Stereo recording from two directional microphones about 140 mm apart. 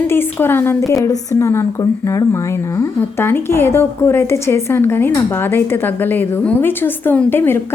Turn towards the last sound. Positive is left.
turn(degrees=15)  # may be behind; listen again after turning